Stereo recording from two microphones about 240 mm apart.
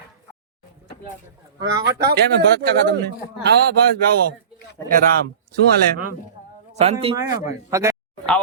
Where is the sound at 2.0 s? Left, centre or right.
Right.